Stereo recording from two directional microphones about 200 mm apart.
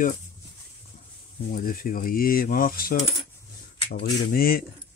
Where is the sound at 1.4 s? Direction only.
45° left (ahead or behind).